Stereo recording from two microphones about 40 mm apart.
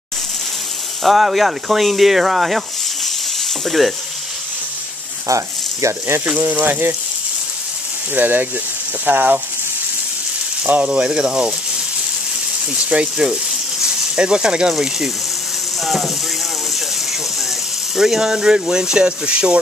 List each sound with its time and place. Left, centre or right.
1.0 s speech: centre
3.6 s speech: centre
6.4 s speech: right
8.1 s speech: right
10.9 s speech: right
13.0 s speech: right
15.8 s speech: centre
17.9 s speech: centre